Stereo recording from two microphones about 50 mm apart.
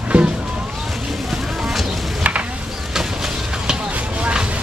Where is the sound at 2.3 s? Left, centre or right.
Right.